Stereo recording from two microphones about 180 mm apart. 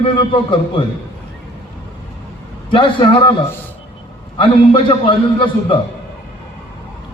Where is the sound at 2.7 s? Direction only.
30° left (ahead or behind).